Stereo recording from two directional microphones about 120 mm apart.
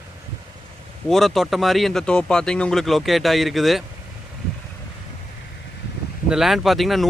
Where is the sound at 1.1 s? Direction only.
Centre (ahead or behind).